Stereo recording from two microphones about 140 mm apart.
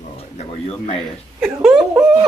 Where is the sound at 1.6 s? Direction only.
5° right (ahead or behind).